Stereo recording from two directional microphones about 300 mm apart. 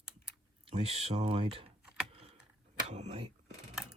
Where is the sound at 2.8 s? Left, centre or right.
Right.